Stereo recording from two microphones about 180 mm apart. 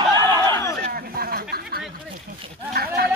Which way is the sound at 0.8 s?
55° right (ahead or behind).